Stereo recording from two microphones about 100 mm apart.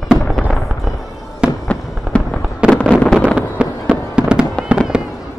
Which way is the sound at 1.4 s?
10° right (ahead or behind).